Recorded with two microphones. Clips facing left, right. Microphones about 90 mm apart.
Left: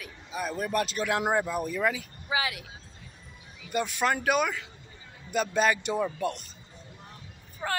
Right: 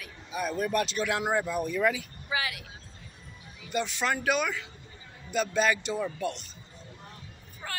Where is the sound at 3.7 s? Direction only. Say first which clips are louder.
Left 2 dB; 45° left (ahead or behind).